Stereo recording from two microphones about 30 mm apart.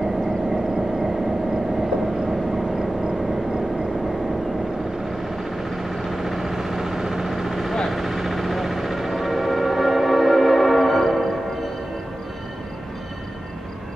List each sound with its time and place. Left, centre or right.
0.0 s vehicle: centre
5.7 s vehicle: centre
7.9 s train: centre